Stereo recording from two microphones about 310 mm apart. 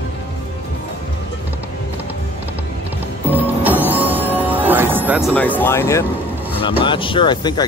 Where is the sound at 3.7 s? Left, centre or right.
Centre.